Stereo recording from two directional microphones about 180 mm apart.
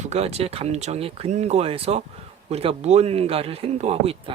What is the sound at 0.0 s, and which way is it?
Speech, 35° right (ahead or behind).